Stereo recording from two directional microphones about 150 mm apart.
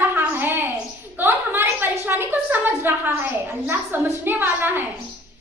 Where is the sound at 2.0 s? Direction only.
15° right (ahead or behind).